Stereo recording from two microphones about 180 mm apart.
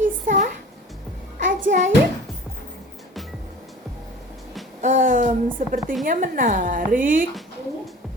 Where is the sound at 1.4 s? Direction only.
45° right (ahead or behind).